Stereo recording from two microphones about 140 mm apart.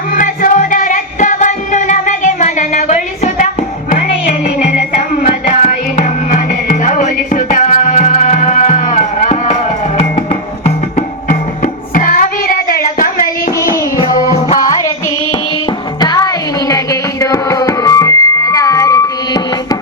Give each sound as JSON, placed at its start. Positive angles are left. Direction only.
{"t": 0.1, "sound": "music", "side_deg": 75}
{"t": 5.2, "sound": "music", "side_deg": 60}
{"t": 11.3, "sound": "music", "side_deg": 75}
{"t": 14.6, "sound": "music", "side_deg": 25}
{"t": 16.0, "sound": "music", "side_deg": 25}